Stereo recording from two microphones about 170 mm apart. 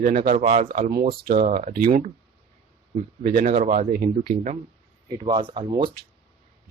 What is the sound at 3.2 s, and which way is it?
Speech, 60° right (ahead or behind).